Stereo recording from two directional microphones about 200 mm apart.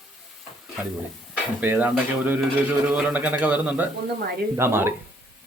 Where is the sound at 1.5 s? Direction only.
10° right (ahead or behind).